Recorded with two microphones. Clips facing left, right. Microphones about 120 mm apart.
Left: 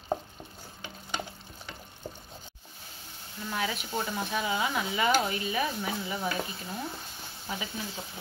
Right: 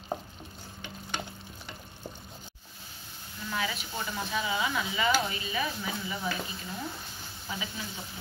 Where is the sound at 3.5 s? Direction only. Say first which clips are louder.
Left 2 dB; 40° left (ahead or behind).